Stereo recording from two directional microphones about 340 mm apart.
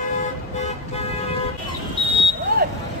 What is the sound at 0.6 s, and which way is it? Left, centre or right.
Toot, centre.